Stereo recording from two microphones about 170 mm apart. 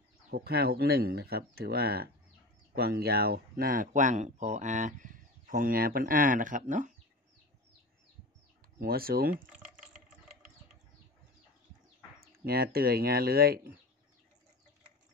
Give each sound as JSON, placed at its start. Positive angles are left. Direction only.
{"t": 0.3, "sound": "speech", "side_deg": -65}
{"t": 8.7, "sound": "speech", "side_deg": -60}
{"t": 12.2, "sound": "speech", "side_deg": -60}